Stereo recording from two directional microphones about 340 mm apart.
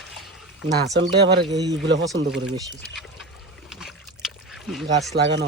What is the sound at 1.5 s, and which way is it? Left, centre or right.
Speech, centre.